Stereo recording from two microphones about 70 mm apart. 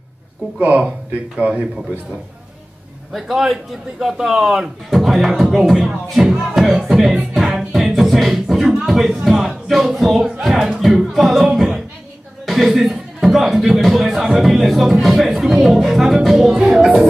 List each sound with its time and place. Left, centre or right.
0.6 s speech: centre
3.1 s speech: centre
6.0 s music: centre
12.4 s a man's voice: centre